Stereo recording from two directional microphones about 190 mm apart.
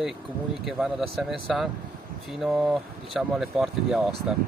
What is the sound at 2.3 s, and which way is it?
Speech, centre (ahead or behind).